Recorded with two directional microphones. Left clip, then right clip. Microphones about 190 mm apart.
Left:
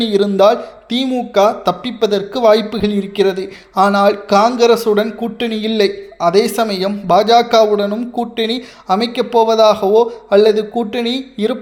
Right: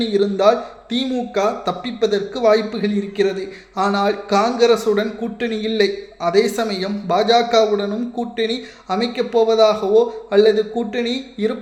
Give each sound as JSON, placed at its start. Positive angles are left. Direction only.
{"t": 0.0, "sound": "a man's voice", "side_deg": 30}